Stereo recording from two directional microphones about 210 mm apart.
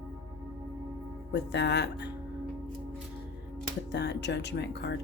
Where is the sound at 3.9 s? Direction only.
55° left (ahead or behind).